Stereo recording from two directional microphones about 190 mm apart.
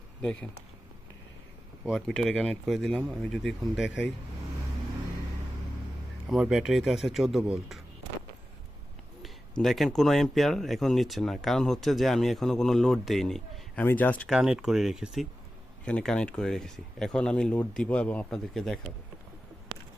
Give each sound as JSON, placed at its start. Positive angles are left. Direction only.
{"t": 0.2, "sound": "speech", "side_deg": 5}
{"t": 1.8, "sound": "speech", "side_deg": 0}
{"t": 6.2, "sound": "speech", "side_deg": -5}
{"t": 9.2, "sound": "speech", "side_deg": 0}
{"t": 14.3, "sound": "speech", "side_deg": -5}